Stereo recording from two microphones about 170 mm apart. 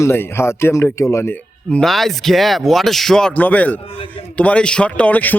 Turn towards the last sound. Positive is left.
turn(degrees=10)  # may be behind; listen again after turning